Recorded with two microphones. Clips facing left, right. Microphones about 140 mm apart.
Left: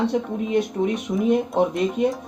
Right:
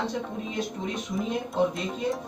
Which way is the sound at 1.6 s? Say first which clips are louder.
Even; 60° left (ahead or behind).